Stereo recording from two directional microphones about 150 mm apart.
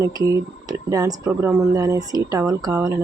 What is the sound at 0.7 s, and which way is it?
Speech, 25° right (ahead or behind).